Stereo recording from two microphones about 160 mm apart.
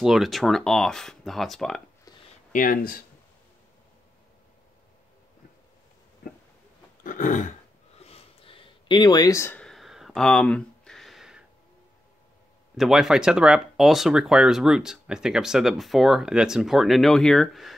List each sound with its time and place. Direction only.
0.0 s speech: centre (ahead or behind)
2.5 s speech: 60° left (ahead or behind)
7.0 s burping: 55° left (ahead or behind)
8.0 s a sound: 40° left (ahead or behind); by 11.4 s centre (ahead or behind)
12.7 s speech: centre (ahead or behind)